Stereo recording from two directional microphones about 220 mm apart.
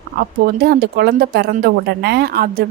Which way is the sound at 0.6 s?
45° right (ahead or behind).